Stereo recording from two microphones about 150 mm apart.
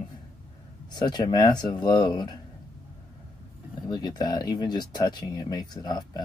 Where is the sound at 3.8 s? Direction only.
25° left (ahead or behind).